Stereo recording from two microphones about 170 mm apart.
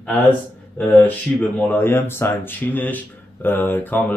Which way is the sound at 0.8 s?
5° left (ahead or behind).